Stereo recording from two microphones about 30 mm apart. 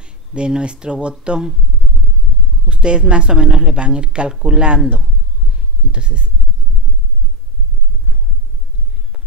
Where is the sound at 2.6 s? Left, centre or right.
Right.